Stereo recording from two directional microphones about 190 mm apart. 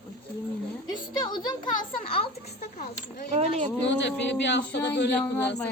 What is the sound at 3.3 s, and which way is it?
Speech, 35° right (ahead or behind).